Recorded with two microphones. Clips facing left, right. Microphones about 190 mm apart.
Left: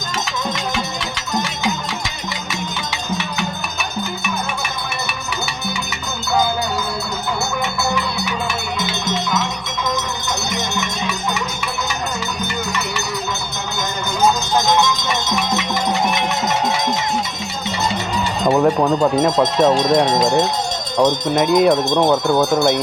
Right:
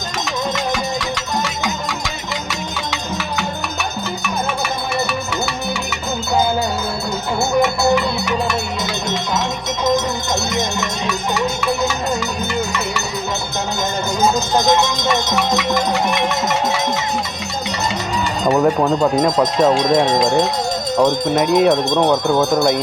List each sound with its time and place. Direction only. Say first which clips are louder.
18.4 s speech: even; centre (ahead or behind)